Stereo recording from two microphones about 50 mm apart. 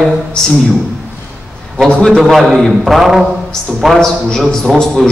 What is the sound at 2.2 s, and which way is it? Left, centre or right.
A man's voice, centre.